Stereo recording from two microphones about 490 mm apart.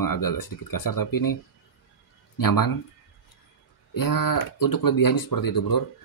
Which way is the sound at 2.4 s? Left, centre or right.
Left.